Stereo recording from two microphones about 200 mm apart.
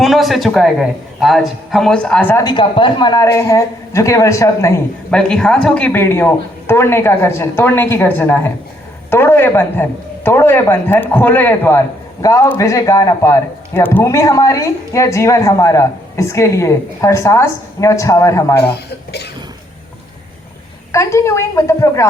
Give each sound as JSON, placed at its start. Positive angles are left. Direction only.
{"t": 0.0, "sound": "a man's voice", "side_deg": 0}
{"t": 2.4, "sound": "a man's voice", "side_deg": 20}
{"t": 5.1, "sound": "a man's voice", "side_deg": 5}
{"t": 20.9, "sound": "a man's voice", "side_deg": 15}